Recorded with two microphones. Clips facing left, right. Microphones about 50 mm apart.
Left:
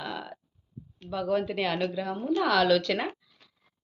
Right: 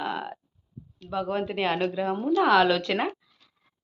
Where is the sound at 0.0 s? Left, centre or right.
Right.